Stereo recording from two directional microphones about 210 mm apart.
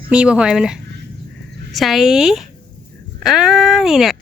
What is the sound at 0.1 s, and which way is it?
Speech, 5° right (ahead or behind).